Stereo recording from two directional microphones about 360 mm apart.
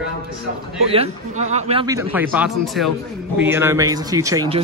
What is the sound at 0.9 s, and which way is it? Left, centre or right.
Speech, centre.